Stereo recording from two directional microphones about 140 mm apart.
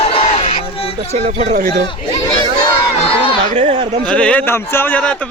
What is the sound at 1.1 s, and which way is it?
Speech, 50° right (ahead or behind).